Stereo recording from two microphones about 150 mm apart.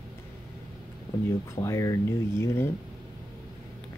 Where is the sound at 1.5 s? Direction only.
20° left (ahead or behind).